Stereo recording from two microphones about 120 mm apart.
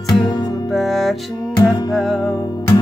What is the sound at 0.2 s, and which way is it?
Music, 40° left (ahead or behind).